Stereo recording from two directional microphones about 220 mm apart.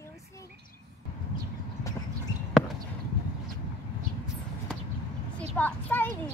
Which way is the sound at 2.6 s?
5° left (ahead or behind).